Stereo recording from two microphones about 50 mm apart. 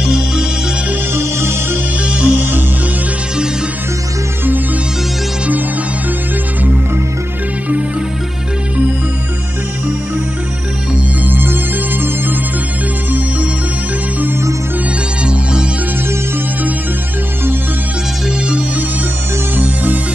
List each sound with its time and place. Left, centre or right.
1.1 s music: right
2.0 s music: right
11.2 s music: right
19.5 s music: right